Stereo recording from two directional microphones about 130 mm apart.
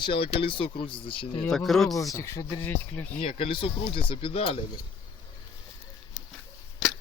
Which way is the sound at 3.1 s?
45° left (ahead or behind).